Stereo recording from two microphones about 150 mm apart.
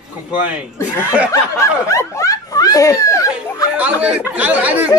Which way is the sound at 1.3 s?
20° left (ahead or behind).